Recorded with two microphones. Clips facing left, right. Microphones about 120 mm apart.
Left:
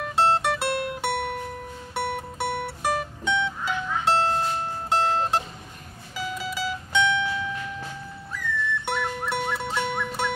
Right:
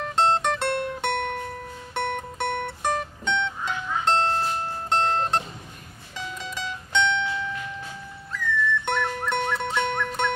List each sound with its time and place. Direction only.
0.0 s music: 5° left (ahead or behind)
8.8 s music: 5° left (ahead or behind)